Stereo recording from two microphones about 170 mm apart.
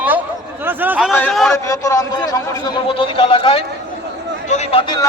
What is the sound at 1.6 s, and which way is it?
A man's voice, 20° left (ahead or behind).